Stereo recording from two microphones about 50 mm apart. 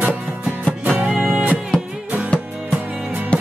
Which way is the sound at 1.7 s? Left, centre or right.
Centre.